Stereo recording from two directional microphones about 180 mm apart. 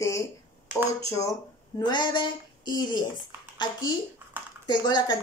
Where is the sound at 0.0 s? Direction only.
15° left (ahead or behind).